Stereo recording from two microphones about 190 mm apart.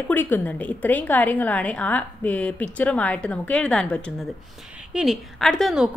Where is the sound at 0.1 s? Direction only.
10° left (ahead or behind).